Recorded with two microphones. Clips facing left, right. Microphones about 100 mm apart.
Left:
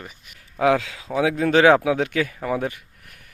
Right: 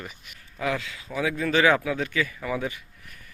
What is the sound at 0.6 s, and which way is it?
Speech, 90° left.